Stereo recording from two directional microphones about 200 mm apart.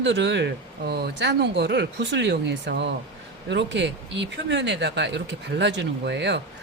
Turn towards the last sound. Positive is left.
turn(degrees=-60)  # may be behind; listen again after turning